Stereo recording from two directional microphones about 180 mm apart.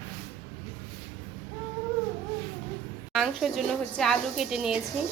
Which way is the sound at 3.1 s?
Centre (ahead or behind).